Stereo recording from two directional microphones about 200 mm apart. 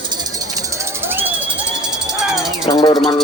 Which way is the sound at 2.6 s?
20° left (ahead or behind).